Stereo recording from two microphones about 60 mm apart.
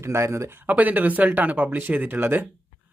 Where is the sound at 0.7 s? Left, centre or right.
Right.